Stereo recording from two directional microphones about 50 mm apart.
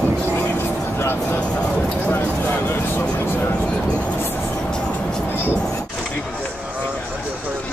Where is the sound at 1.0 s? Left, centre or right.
Left.